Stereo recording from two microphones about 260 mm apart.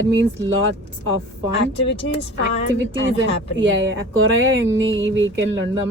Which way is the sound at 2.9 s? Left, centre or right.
Right.